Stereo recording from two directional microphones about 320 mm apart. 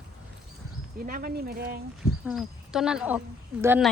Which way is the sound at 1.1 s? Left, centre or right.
Right.